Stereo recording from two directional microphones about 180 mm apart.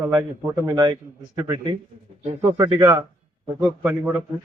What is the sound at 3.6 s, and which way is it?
Speech, 10° right (ahead or behind).